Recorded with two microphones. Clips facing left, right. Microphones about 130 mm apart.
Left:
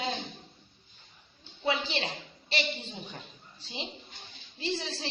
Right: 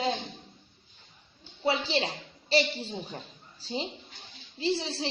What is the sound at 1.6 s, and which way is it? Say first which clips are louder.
A woman's voice: right 3 dB; 35° right (ahead or behind).